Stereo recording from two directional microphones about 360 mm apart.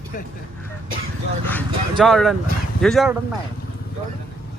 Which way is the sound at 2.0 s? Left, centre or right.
Centre.